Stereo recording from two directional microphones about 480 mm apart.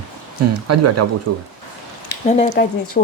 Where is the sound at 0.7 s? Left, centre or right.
Right.